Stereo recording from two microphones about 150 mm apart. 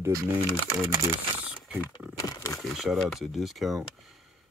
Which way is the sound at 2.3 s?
20° left (ahead or behind).